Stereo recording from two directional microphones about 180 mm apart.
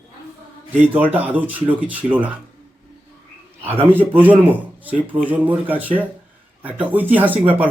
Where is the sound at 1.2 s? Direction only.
10° right (ahead or behind).